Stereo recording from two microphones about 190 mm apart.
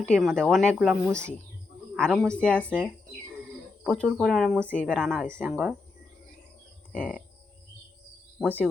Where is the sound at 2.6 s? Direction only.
10° right (ahead or behind).